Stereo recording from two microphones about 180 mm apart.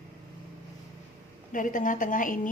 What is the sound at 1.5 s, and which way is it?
Speech, 45° left (ahead or behind).